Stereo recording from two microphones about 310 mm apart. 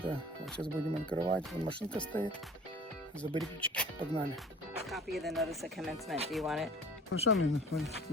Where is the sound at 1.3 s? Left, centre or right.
Centre.